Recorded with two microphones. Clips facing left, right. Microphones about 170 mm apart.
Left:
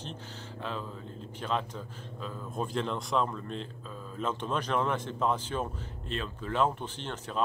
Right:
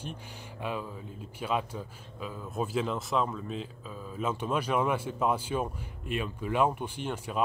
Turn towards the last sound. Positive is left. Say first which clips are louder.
# right 2 dB
turn(degrees=-10)  # may be behind; listen again after turning